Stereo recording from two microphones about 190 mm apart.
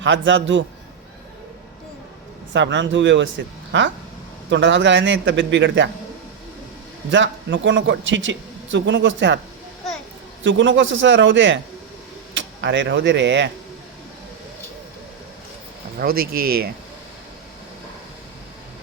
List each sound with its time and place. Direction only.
0.0 s speech: 75° right (ahead or behind)
2.5 s speech: 70° right (ahead or behind)
7.1 s speech: 75° right (ahead or behind)
10.4 s speech: 75° right (ahead or behind)
16.0 s speech: 50° right (ahead or behind)